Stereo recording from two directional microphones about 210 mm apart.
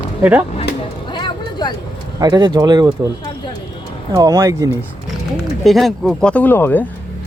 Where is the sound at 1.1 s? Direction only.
20° left (ahead or behind).